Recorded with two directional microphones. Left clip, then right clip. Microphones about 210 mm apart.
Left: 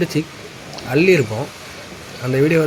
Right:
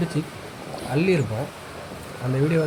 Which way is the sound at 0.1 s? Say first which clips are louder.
Left 7 dB; 15° left (ahead or behind).